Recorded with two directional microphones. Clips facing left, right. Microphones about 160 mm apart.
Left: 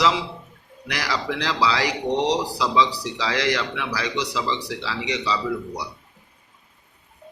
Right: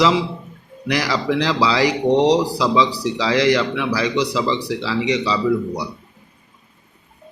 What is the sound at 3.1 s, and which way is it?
Speech, 5° right (ahead or behind).